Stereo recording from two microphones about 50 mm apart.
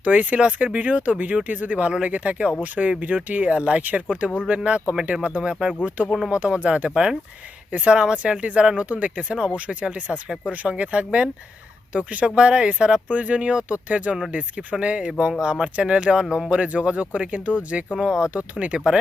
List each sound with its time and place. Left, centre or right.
0.0 s speech: right
2.8 s speech: centre
3.2 s speech: right
5.4 s speech: centre
7.7 s speech: right
7.9 s speech: centre
17.9 s speech: centre
18.3 s speech: right